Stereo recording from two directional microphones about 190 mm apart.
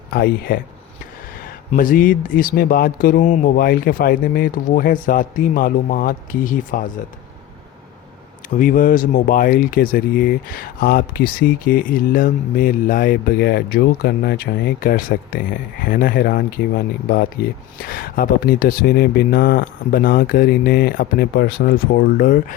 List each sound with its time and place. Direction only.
0.1 s speech: 55° left (ahead or behind)
1.7 s speech: 45° left (ahead or behind)
8.5 s speech: 45° left (ahead or behind)